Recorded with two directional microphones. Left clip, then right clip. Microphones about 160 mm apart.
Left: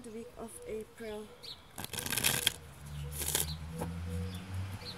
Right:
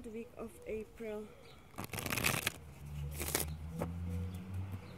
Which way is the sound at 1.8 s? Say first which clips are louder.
Left 2 dB; 25° right (ahead or behind).